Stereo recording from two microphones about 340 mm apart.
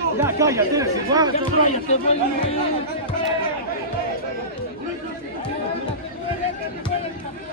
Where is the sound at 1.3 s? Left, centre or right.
Centre.